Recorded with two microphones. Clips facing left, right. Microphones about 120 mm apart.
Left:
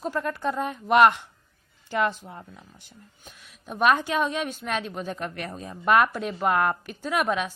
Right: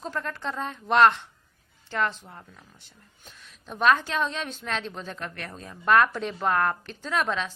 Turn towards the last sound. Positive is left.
turn(degrees=10)  # may be behind; listen again after turning